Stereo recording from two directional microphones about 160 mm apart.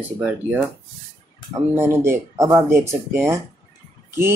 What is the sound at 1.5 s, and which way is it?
Speech, 20° right (ahead or behind).